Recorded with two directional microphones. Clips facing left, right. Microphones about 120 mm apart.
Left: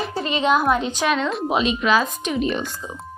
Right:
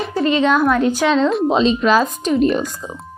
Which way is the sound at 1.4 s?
30° right (ahead or behind).